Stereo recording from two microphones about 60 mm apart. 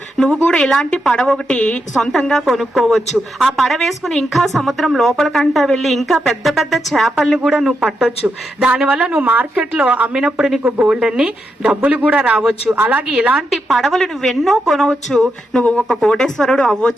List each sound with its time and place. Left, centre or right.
0.2 s a woman's voice: centre
1.9 s a woman's voice: centre
8.5 s a woman's voice: centre
10.2 s speech: centre
12.6 s a woman's voice: right
13.1 s speech: centre
13.5 s a woman's voice: centre